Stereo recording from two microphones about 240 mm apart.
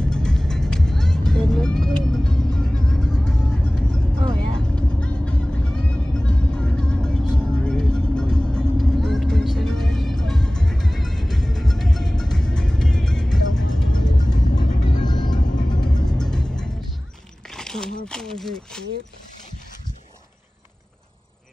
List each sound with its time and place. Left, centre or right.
0.0 s vehicle: centre
4.6 s music: centre
14.0 s music: centre
15.0 s vehicle: centre
16.1 s music: centre
17.6 s a sound: centre